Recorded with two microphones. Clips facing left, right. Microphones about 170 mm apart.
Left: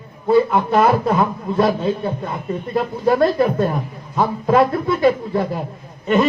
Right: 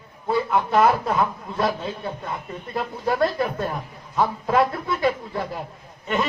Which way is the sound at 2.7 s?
40° left (ahead or behind).